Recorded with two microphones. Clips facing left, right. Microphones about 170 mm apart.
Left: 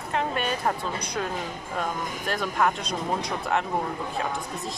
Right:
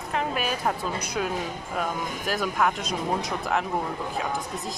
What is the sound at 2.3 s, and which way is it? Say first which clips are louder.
Speech: even; centre (ahead or behind).